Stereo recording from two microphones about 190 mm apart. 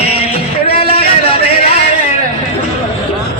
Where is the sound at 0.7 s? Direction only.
30° left (ahead or behind).